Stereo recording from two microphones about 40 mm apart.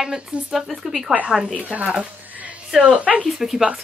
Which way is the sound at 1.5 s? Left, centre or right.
Right.